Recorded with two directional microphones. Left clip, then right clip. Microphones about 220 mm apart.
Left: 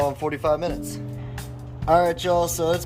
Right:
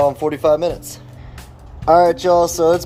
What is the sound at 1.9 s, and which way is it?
Speech, 25° right (ahead or behind).